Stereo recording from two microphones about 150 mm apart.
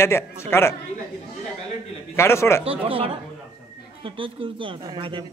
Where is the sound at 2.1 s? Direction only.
20° left (ahead or behind).